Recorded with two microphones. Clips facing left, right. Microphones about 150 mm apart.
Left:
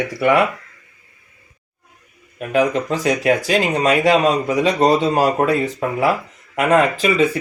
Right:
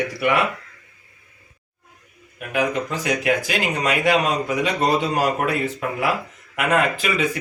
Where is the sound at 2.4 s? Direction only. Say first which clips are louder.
Left 5 dB; 35° left (ahead or behind).